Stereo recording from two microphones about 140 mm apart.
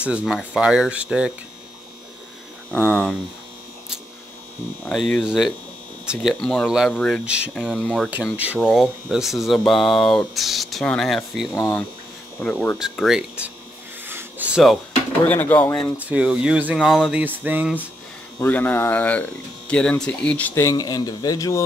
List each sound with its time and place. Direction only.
0.2 s speech: 5° right (ahead or behind)
2.7 s speech: 10° left (ahead or behind)
4.9 s speech: centre (ahead or behind)
7.2 s speech: 10° right (ahead or behind)
8.2 s speech: 10° right (ahead or behind)
11.5 s speech: 15° left (ahead or behind)
12.7 s speech: centre (ahead or behind)
14.0 s a sound: 15° right (ahead or behind)
15.2 s speech: 10° left (ahead or behind)
16.0 s speech: 10° right (ahead or behind)
18.4 s speech: 15° left (ahead or behind)
20.6 s a man's voice: 30° left (ahead or behind)